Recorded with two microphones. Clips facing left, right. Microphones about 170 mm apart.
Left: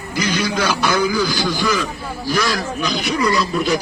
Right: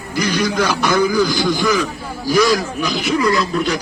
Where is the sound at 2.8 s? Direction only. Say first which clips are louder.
Right 2 dB; 5° right (ahead or behind).